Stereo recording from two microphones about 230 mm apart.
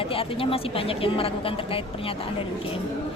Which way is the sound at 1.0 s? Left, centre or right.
Left.